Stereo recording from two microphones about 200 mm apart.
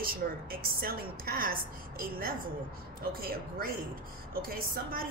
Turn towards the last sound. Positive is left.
turn(degrees=-45)  # may be behind; listen again after turning